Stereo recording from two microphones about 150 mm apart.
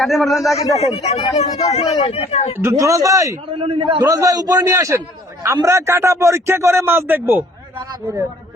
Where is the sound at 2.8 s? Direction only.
20° right (ahead or behind).